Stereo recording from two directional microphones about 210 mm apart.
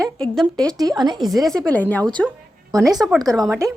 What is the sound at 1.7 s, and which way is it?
Speech, 5° left (ahead or behind).